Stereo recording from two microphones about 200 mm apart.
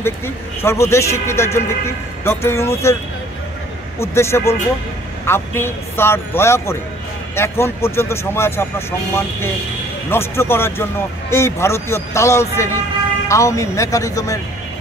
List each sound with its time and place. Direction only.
0.6 s speech: 15° left (ahead or behind)
4.0 s speech: 15° left (ahead or behind)